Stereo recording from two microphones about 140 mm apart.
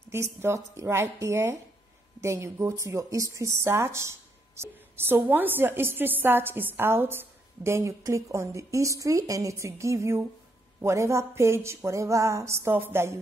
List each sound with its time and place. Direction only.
0.1 s speech: 20° right (ahead or behind)